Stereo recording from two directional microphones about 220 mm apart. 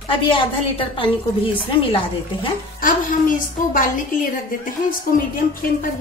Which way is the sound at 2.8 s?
40° left (ahead or behind).